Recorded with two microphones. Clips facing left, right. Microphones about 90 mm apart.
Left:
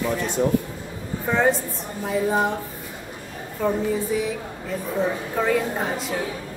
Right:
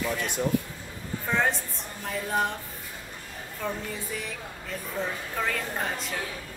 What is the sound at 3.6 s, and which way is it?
A woman's voice, 5° left (ahead or behind).